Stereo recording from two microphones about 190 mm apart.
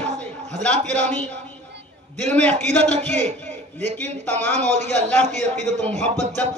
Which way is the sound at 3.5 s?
35° right (ahead or behind).